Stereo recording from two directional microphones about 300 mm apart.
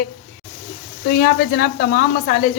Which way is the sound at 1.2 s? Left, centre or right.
Left.